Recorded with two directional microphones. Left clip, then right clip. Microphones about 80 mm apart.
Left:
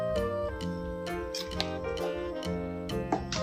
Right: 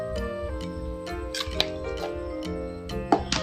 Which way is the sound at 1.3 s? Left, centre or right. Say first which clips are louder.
Right 6 dB; right.